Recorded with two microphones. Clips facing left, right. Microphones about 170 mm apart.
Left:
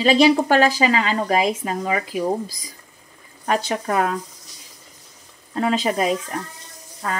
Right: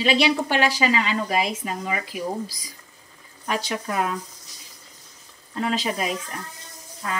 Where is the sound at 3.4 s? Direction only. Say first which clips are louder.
Left 5 dB; 45° left (ahead or behind).